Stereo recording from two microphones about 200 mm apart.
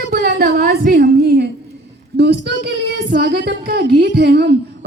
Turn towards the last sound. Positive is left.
turn(degrees=-55)  # may be behind; listen again after turning